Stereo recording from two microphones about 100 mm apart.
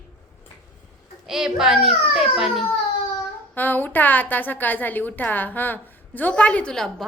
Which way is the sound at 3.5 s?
20° left (ahead or behind).